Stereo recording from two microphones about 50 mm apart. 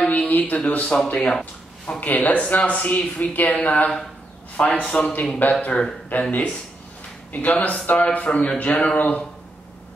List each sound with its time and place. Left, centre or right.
0.1 s speech: left
0.9 s speech: centre
2.0 s a man's voice: left; by 5.1 s centre
5.4 s speech: left
6.1 s a man's voice: left
7.3 s a man's voice: left